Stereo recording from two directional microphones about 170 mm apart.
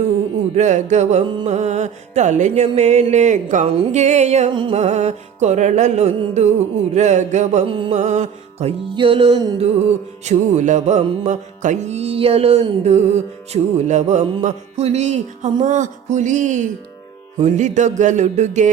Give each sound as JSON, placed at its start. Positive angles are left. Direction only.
{"t": 0.5, "sound": "music", "side_deg": -45}
{"t": 4.5, "sound": "music", "side_deg": -30}
{"t": 4.8, "sound": "music", "side_deg": -40}
{"t": 9.6, "sound": "music", "side_deg": -40}